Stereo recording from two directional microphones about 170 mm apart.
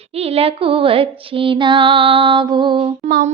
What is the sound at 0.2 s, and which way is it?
Mantra, 35° right (ahead or behind).